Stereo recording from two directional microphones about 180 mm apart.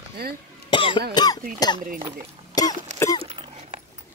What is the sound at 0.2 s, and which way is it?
Speech, 60° right (ahead or behind).